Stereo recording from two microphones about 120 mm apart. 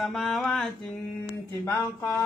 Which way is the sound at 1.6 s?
25° left (ahead or behind).